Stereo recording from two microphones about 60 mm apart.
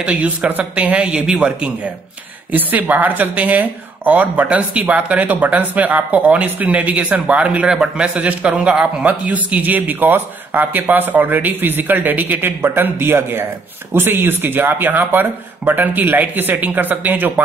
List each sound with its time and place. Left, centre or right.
0.0 s speech: centre
2.5 s a man's voice: right